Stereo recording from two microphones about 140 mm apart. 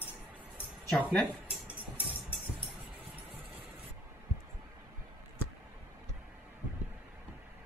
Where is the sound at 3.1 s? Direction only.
10° right (ahead or behind).